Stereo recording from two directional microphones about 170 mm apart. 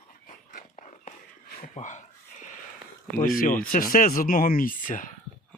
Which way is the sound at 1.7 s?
45° left (ahead or behind).